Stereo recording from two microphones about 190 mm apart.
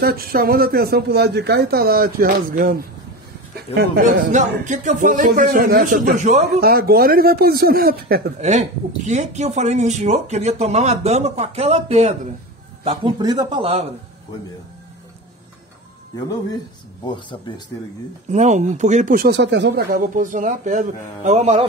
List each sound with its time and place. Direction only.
0.0 s speech: 50° right (ahead or behind)
4.0 s speech: 40° right (ahead or behind)
6.6 s speech: 55° right (ahead or behind)
8.4 s a man's voice: 35° right (ahead or behind)
17.0 s speech: 25° left (ahead or behind)
18.3 s speech: 40° right (ahead or behind)